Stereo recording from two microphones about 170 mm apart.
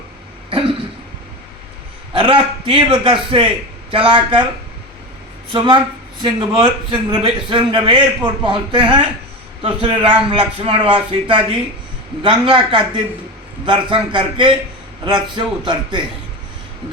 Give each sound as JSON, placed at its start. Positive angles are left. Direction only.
{"t": 2.1, "sound": "a man's voice", "side_deg": -30}
{"t": 5.5, "sound": "a man's voice", "side_deg": -25}